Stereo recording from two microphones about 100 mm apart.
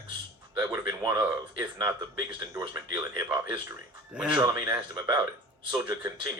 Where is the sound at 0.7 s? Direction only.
45° right (ahead or behind).